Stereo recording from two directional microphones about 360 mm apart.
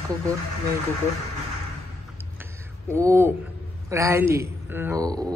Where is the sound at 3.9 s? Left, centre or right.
Centre.